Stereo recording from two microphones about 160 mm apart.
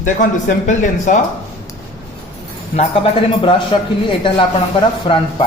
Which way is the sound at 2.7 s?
35° left (ahead or behind).